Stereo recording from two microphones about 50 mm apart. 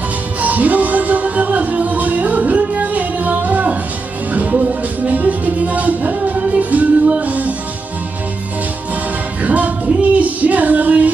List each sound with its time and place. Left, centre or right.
0.4 s music: right
9.4 s female singing: right